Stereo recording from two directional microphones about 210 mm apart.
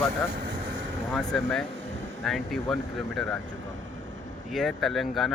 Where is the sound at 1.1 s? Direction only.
5° left (ahead or behind).